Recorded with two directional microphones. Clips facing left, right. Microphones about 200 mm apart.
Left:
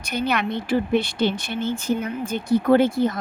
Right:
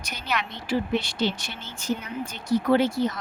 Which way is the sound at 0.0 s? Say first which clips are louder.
Left 7 dB; 55° left (ahead or behind).